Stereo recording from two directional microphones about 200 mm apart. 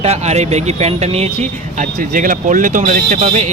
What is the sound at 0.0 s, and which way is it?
Speech, 30° right (ahead or behind).